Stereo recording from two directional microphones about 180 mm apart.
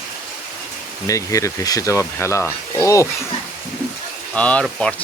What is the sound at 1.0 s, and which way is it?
Speech, 20° left (ahead or behind).